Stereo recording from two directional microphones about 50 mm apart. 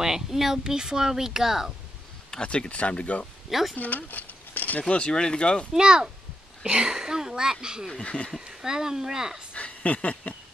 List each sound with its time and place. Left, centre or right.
0.0 s speech: centre
2.3 s speech: centre
3.4 s speech: centre
3.7 s speech: left
4.8 s speech: centre
5.7 s speech: centre
6.9 s speech: centre
7.9 s speech: left
8.4 s speech: centre
9.6 s a sound: left